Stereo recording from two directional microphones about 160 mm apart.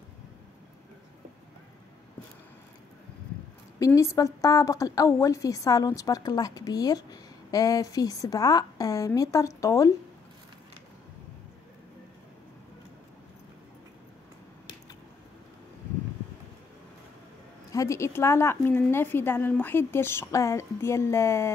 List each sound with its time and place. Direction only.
3.8 s a woman's voice: 20° left (ahead or behind)
17.6 s a woman's voice: 20° left (ahead or behind)